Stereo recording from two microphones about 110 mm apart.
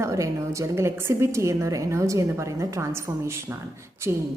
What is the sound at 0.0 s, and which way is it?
A woman's voice, 30° right (ahead or behind).